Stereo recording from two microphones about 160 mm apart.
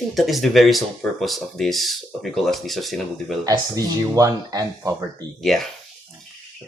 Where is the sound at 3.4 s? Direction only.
20° right (ahead or behind).